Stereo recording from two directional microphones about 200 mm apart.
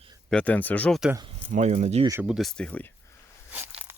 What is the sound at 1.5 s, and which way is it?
Speech, 35° right (ahead or behind).